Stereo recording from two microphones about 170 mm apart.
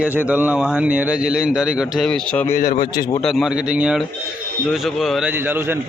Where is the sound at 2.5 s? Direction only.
60° left (ahead or behind).